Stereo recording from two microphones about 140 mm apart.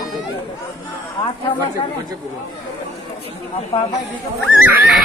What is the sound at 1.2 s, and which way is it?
Speech, 30° left (ahead or behind).